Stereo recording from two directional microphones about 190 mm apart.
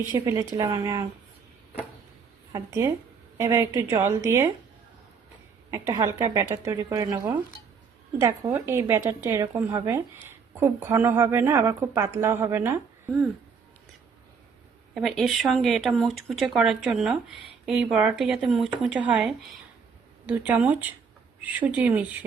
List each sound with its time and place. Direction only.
0.1 s speech: 20° right (ahead or behind)
2.5 s a woman's voice: 15° right (ahead or behind)
5.7 s speech: 15° right (ahead or behind)
14.9 s speech: centre (ahead or behind)